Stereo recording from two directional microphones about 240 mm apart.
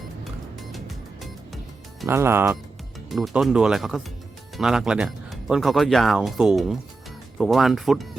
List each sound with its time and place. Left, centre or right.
0.7 s music: centre
2.0 s speech: centre